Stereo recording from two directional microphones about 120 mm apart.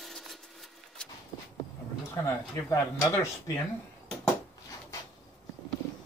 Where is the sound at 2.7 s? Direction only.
25° left (ahead or behind).